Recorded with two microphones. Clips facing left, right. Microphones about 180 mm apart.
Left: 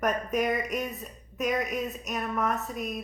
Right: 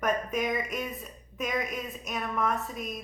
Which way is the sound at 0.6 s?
40° left (ahead or behind).